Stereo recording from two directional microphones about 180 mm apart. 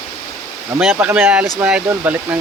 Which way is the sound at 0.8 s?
5° right (ahead or behind).